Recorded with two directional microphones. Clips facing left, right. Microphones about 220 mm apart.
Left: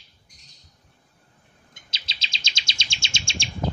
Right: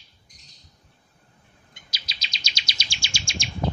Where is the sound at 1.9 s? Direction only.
25° left (ahead or behind).